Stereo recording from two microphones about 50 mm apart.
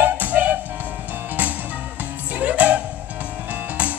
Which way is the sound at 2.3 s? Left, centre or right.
Right.